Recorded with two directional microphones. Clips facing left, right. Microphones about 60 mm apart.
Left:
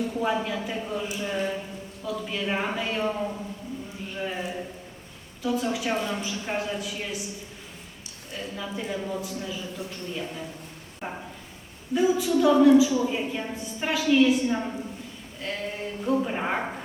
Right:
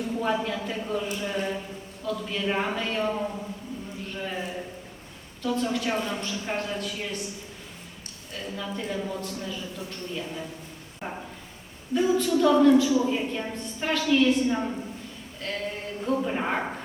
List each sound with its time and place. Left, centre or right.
0.1 s a woman's voice: centre
8.3 s a woman's voice: centre
11.0 s a sound: centre
11.9 s a woman's voice: centre